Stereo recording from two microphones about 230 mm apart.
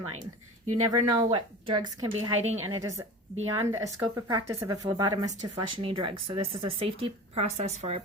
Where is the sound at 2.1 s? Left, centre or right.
Right.